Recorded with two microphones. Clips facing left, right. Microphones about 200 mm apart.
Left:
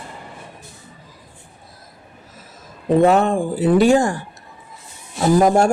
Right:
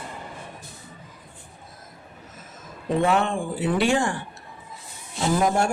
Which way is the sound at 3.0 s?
40° left (ahead or behind).